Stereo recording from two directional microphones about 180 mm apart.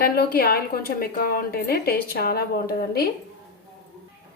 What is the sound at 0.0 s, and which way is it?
A woman's voice, 55° left (ahead or behind).